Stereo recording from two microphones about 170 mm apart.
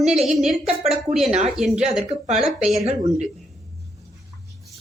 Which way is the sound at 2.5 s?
Centre (ahead or behind).